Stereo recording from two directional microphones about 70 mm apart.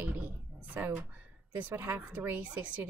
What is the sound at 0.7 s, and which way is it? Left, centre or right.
A woman's voice, right.